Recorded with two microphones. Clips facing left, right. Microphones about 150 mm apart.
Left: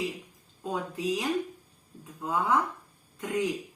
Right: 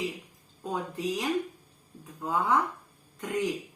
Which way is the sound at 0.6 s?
Centre (ahead or behind).